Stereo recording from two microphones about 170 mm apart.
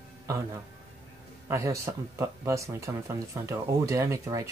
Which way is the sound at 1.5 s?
20° right (ahead or behind).